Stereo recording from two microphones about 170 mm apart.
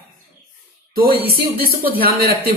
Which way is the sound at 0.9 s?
65° right (ahead or behind).